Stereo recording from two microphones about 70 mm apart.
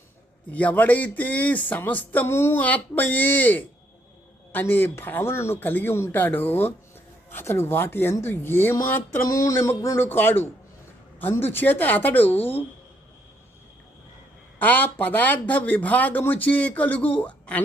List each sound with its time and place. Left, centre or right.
0.5 s speech: left
2.6 s speech: left
9.3 s a sound: left
10.0 s speech: left
14.6 s speech: left